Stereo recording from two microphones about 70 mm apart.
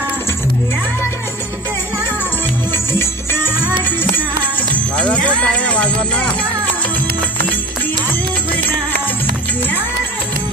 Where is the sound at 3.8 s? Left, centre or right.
Left.